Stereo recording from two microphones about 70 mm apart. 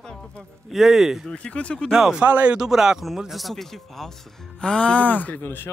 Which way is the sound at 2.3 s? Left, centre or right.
Right.